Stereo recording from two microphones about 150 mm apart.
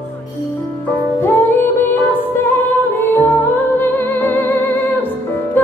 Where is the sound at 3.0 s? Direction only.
15° left (ahead or behind).